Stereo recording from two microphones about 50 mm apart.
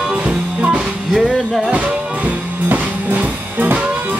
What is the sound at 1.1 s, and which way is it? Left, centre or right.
Music, centre.